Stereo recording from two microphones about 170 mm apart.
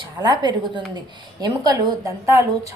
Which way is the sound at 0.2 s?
25° right (ahead or behind).